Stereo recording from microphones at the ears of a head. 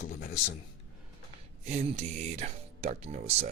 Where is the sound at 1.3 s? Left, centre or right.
Right.